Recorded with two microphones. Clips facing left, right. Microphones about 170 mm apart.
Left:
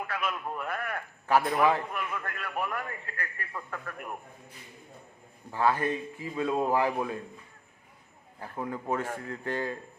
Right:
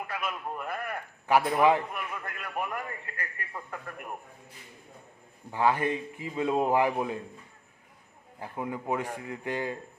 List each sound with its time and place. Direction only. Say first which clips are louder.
0.1 s a man's voice: left 1 dB; 10° right (ahead or behind)
5.5 s a man's voice: right 1 dB; 15° right (ahead or behind)
8.4 s a man's voice: right 1 dB; 15° right (ahead or behind)